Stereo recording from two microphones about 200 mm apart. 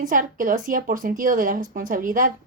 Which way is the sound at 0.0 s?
40° right (ahead or behind).